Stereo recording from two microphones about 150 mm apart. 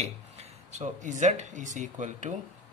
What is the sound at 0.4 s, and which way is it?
Speech, 50° right (ahead or behind).